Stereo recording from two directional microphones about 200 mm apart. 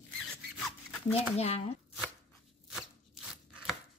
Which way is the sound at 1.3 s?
30° left (ahead or behind).